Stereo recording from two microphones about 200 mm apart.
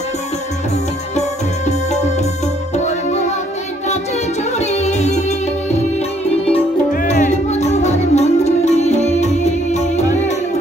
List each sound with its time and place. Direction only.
2.7 s music: 35° left (ahead or behind)
4.6 s music: 35° left (ahead or behind)
6.9 s music: 40° left (ahead or behind)